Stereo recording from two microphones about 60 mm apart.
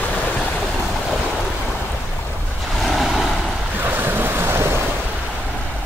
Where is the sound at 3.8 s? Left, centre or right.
Right.